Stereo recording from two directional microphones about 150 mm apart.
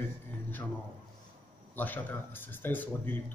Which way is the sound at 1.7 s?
10° left (ahead or behind).